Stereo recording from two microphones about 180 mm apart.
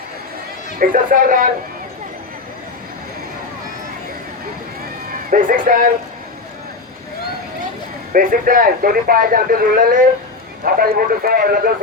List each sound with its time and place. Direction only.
0.8 s speech: 50° right (ahead or behind)
5.3 s speech: 50° right (ahead or behind)
8.1 s speech: 50° right (ahead or behind)